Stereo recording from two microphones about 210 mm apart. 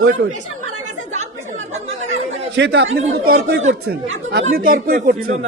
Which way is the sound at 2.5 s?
55° right (ahead or behind).